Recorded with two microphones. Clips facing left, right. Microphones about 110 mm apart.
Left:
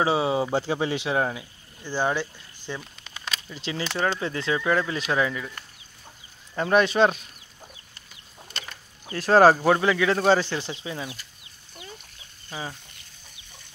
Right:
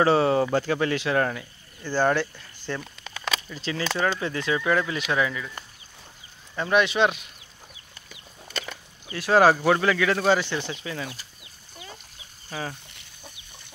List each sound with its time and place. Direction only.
0.0 s speech: 10° left (ahead or behind)
0.5 s speech: 20° left (ahead or behind)
3.4 s speech: 25° left (ahead or behind)
6.5 s speech: 40° left (ahead or behind)
9.0 s speech: 40° left (ahead or behind)
9.8 s speech: 20° left (ahead or behind)
10.8 s speech: 20° left (ahead or behind)